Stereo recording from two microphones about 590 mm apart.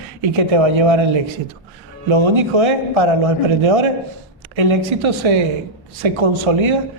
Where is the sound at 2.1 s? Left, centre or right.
Right.